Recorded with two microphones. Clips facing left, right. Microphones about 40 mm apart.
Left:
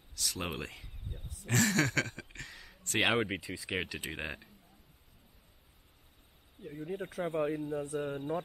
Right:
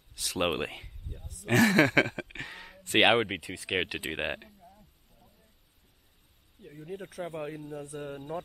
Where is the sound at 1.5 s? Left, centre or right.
Centre.